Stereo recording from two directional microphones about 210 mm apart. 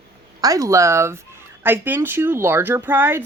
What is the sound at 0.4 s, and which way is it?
Speech, 15° right (ahead or behind).